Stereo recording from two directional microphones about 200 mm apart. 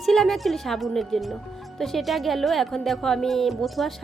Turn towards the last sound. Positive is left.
turn(degrees=0)  # may be behind; listen again after turning